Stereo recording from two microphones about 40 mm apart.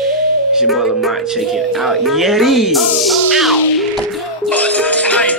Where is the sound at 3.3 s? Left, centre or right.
Centre.